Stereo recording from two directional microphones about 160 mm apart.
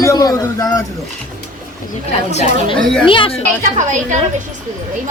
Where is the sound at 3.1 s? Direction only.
35° left (ahead or behind).